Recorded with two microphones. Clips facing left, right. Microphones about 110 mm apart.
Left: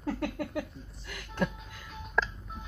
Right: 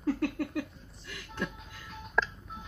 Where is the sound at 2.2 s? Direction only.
Centre (ahead or behind).